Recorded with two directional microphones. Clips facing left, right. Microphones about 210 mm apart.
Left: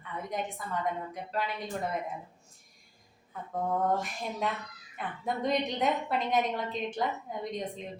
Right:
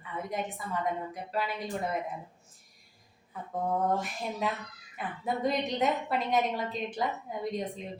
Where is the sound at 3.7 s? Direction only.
5° right (ahead or behind).